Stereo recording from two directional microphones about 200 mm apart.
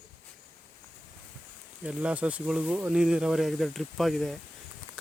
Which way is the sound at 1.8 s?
5° right (ahead or behind).